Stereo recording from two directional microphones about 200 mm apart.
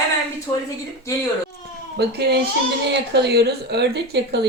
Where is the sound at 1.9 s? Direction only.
55° right (ahead or behind).